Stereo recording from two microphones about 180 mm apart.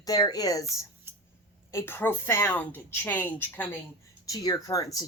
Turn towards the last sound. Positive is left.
turn(degrees=20)  # may be behind; listen again after turning